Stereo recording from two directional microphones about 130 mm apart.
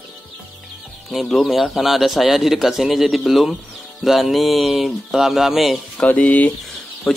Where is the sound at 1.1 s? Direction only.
Centre (ahead or behind).